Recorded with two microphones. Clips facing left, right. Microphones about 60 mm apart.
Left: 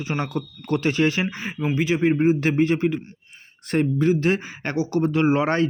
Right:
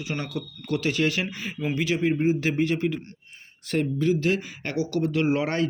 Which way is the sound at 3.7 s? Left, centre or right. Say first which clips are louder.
Left 4 dB; left.